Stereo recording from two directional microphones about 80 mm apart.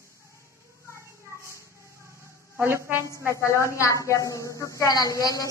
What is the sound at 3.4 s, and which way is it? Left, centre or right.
A woman's voice, left.